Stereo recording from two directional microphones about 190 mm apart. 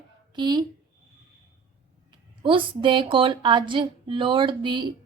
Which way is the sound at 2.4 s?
25° right (ahead or behind).